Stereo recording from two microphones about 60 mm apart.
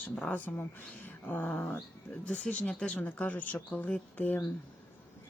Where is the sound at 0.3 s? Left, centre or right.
Left.